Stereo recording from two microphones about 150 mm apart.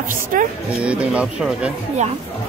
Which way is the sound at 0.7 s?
10° right (ahead or behind).